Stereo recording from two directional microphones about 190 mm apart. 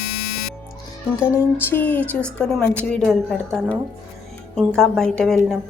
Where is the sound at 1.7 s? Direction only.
10° left (ahead or behind).